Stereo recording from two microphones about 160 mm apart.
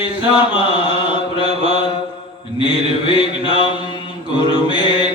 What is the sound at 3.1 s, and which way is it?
Mantra, 30° left (ahead or behind).